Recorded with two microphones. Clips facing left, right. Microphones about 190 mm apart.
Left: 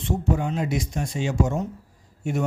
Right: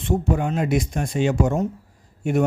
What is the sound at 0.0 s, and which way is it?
Speech, 55° right (ahead or behind).